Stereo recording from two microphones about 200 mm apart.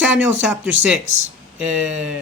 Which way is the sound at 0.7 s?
75° right (ahead or behind).